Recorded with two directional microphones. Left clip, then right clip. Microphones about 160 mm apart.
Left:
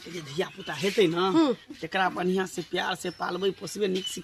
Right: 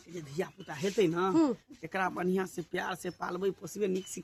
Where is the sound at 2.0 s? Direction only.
5° right (ahead or behind).